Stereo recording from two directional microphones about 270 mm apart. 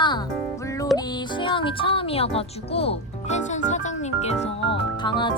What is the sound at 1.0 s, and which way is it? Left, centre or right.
Speech, centre.